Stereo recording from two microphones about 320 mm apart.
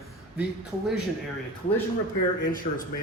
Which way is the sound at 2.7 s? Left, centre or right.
Left.